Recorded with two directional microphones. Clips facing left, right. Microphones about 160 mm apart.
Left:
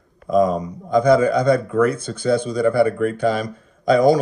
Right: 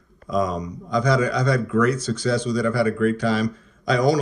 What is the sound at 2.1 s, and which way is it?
Speech, 30° left (ahead or behind).